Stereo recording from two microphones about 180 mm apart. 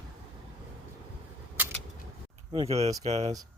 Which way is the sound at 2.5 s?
30° right (ahead or behind).